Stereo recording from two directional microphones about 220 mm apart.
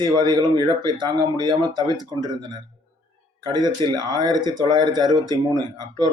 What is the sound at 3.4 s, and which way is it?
Speech, 20° right (ahead or behind).